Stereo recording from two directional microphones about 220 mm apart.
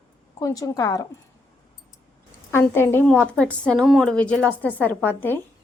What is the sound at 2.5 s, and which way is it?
A woman's voice, 10° left (ahead or behind).